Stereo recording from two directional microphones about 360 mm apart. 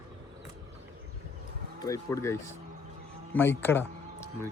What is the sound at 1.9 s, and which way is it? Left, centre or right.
Speech, centre.